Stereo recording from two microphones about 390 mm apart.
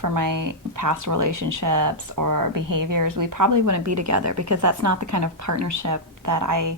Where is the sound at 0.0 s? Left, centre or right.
Right.